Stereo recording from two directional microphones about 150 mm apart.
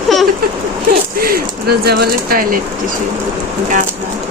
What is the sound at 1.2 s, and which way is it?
Speech, 90° right.